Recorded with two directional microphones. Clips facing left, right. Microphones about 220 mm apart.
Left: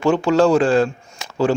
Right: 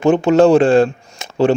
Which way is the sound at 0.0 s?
20° right (ahead or behind).